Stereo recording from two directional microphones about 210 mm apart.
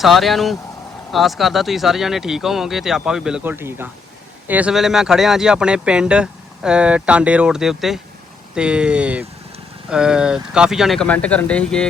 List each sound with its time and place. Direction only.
0.0 s speech: centre (ahead or behind)